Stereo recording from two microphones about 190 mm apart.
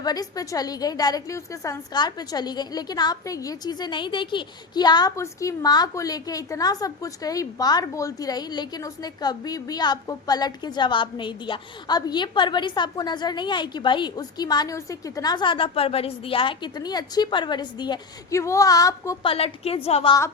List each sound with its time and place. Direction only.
0.0 s a woman's voice: 20° left (ahead or behind)
19.2 s a woman's voice: 30° left (ahead or behind)